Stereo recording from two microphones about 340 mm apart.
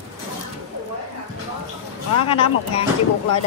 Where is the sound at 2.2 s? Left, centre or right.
Centre.